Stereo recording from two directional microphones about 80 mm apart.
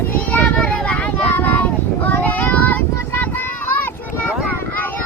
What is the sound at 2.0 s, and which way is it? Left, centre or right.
Child singing, left.